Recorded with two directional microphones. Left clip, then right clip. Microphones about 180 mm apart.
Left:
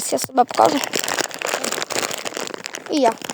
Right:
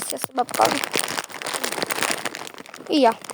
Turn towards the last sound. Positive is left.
turn(degrees=-10)  # may be behind; listen again after turning